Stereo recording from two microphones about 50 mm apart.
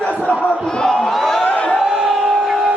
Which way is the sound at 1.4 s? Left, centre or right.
Left.